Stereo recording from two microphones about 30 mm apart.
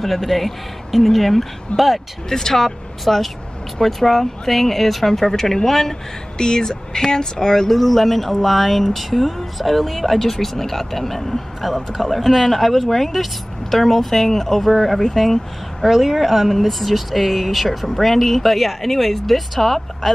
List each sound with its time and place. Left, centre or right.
0.0 s speech: centre
1.7 s speech: left
2.2 s speech: centre
6.3 s speech: left
7.7 s speech: centre
15.9 s speech: centre
17.8 s speech: centre